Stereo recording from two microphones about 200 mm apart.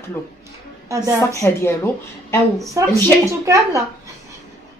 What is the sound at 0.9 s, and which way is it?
Speech, 15° right (ahead or behind).